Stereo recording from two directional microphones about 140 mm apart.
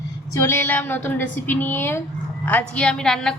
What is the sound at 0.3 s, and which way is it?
A woman's voice, 15° left (ahead or behind).